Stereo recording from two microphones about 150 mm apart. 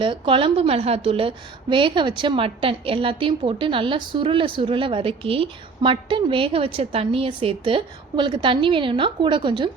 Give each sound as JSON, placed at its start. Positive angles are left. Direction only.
{"t": 0.0, "sound": "a woman's voice", "side_deg": -35}